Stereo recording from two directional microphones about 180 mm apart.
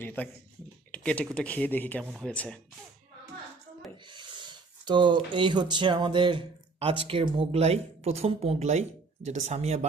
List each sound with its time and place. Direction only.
0.0 s speech: 10° left (ahead or behind)
4.1 s speech: 25° right (ahead or behind)